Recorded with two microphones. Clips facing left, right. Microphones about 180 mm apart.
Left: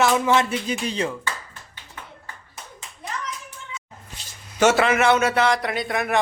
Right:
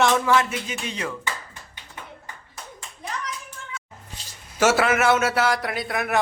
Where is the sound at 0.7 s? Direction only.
30° left (ahead or behind).